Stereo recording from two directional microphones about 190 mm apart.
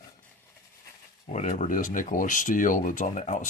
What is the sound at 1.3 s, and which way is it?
Speech, 40° left (ahead or behind).